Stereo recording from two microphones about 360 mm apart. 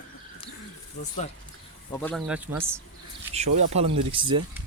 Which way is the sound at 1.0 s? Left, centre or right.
Left.